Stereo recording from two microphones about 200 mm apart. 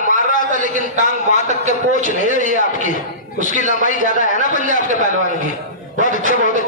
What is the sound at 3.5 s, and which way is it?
Speech, 40° right (ahead or behind).